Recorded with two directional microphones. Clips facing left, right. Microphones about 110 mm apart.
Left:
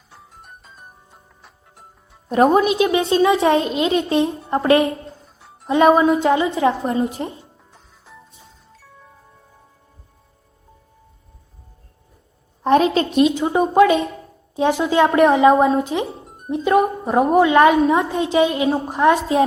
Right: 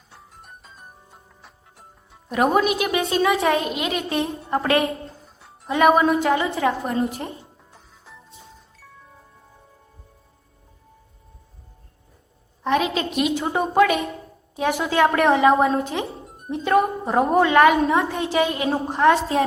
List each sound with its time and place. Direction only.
0.1 s music: centre (ahead or behind)
2.3 s a woman's voice: 30° left (ahead or behind)
5.0 s music: centre (ahead or behind)
5.6 s a woman's voice: 25° left (ahead or behind)
7.7 s music: centre (ahead or behind)
12.6 s a woman's voice: 35° left (ahead or behind)
13.5 s a woman's voice: 20° left (ahead or behind)